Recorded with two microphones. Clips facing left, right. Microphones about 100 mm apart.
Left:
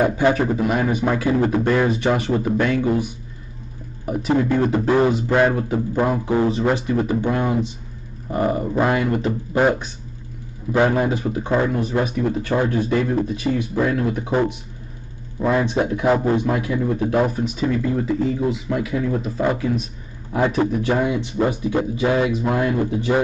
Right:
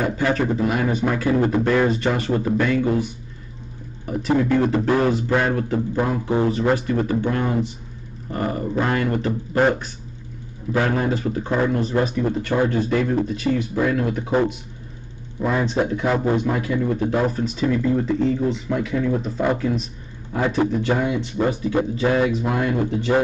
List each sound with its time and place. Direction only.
0.0 s speech: 15° left (ahead or behind)
4.0 s speech: 15° left (ahead or behind)
10.9 s speech: 10° left (ahead or behind)
15.4 s speech: 10° left (ahead or behind)